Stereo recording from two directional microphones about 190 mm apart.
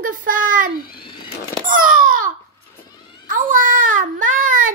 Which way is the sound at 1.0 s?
25° left (ahead or behind).